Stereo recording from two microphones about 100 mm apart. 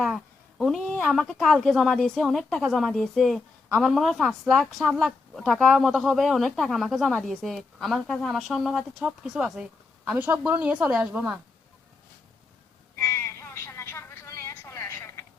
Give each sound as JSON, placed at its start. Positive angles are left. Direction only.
{"t": 0.6, "sound": "speech", "side_deg": 0}
{"t": 10.1, "sound": "a woman's voice", "side_deg": -20}
{"t": 13.0, "sound": "a sound", "side_deg": 20}